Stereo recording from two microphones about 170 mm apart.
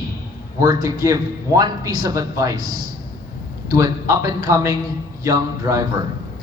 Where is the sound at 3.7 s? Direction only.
20° right (ahead or behind).